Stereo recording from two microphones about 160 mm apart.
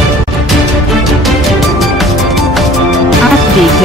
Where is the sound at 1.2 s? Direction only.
Centre (ahead or behind).